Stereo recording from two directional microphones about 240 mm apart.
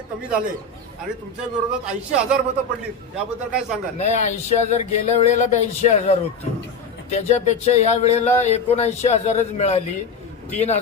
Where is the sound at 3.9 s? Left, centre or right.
Left.